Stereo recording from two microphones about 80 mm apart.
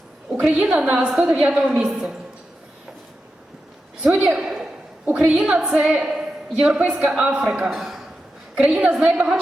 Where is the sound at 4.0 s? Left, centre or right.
Centre.